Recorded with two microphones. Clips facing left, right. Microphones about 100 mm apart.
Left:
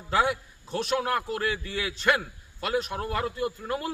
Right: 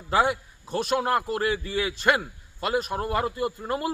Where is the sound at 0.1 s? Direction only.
5° right (ahead or behind).